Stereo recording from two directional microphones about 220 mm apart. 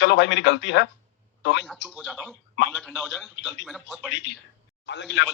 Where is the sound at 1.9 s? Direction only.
Centre (ahead or behind).